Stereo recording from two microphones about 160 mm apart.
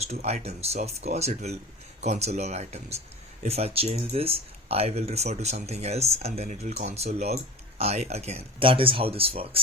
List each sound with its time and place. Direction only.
0.0 s speech: 40° right (ahead or behind)